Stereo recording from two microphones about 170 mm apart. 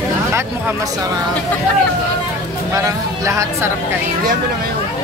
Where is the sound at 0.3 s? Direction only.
15° right (ahead or behind).